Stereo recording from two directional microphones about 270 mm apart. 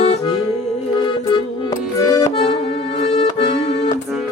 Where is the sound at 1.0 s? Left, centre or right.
Centre.